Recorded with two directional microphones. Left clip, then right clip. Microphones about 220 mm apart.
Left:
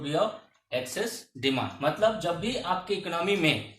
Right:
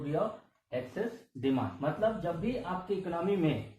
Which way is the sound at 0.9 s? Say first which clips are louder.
Left 4 dB; 15° left (ahead or behind).